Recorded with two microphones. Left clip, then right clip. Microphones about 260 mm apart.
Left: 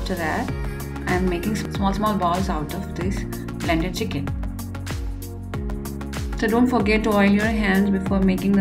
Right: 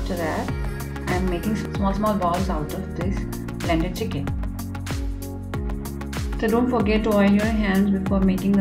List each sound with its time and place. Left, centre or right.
0.1 s speech: centre
3.6 s speech: centre
6.4 s speech: centre